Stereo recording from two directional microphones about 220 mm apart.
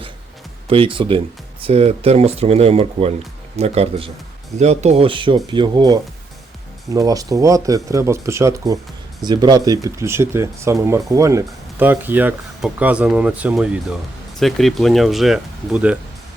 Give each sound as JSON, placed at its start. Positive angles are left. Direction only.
{"t": 0.7, "sound": "speech", "side_deg": -25}